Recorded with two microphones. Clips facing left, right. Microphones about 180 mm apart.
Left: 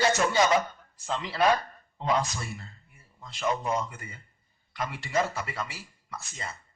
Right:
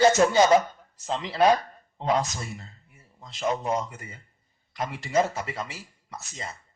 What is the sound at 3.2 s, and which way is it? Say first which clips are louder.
Speech: right 2 dB; 40° right (ahead or behind).